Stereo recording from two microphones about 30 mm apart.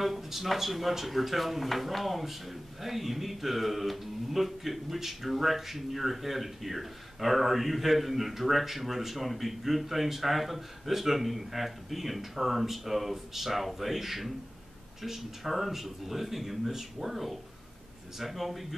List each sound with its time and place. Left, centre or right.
0.0 s speech: centre